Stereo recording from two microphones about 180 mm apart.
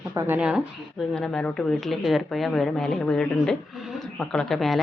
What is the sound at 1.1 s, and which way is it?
Speech, 5° left (ahead or behind).